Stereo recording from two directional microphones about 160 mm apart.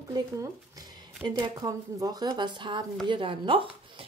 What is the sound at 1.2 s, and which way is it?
A woman's voice, 25° right (ahead or behind).